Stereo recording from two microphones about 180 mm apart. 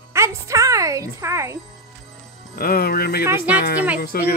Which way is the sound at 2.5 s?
55° left (ahead or behind).